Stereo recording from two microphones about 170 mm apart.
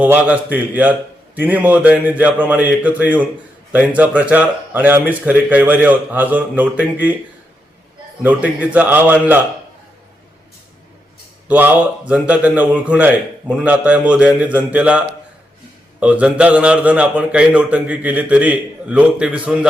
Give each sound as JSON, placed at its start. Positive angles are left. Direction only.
{"t": 0.0, "sound": "a man's voice", "side_deg": -10}
{"t": 8.2, "sound": "a man's voice", "side_deg": -10}
{"t": 11.4, "sound": "a man's voice", "side_deg": -10}